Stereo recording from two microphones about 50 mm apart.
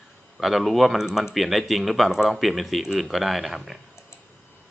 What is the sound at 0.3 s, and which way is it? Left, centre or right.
Speech, centre.